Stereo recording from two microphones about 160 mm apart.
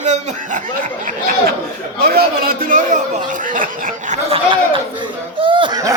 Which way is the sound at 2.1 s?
70° right (ahead or behind).